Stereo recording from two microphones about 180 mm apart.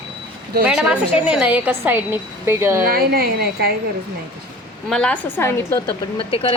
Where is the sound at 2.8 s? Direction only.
55° right (ahead or behind).